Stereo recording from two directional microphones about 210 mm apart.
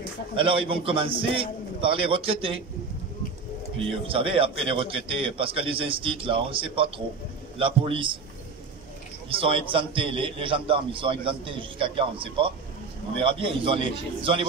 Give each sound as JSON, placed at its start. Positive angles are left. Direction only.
{"t": 0.4, "sound": "a man's voice", "side_deg": -25}
{"t": 4.1, "sound": "a man's voice", "side_deg": -25}
{"t": 9.4, "sound": "a man's voice", "side_deg": -25}